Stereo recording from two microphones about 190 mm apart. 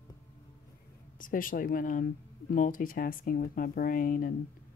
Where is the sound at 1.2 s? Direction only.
45° left (ahead or behind).